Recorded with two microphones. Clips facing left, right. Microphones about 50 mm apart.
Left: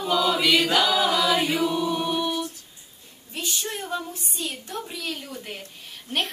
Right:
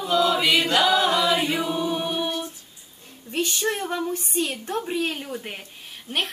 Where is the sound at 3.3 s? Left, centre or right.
Right.